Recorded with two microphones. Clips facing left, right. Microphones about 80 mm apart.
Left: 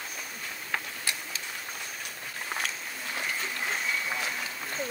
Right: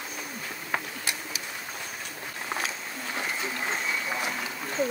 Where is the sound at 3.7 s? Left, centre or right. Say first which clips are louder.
Even; centre.